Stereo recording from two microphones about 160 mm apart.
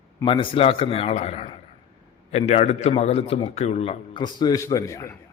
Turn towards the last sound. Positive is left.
turn(degrees=20)  # may be behind; listen again after turning